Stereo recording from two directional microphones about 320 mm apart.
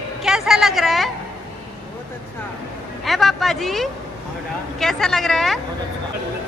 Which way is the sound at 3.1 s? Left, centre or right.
Centre.